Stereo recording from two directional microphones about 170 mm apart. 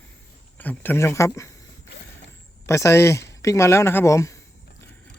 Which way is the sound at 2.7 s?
15° left (ahead or behind).